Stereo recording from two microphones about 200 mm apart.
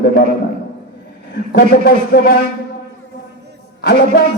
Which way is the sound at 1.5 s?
50° left (ahead or behind).